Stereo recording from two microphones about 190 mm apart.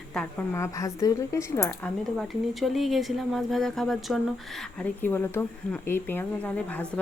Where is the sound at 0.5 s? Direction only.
15° left (ahead or behind).